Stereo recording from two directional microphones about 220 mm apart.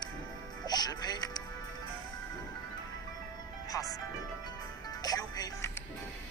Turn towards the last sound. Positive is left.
turn(degrees=15)  # may be behind; listen again after turning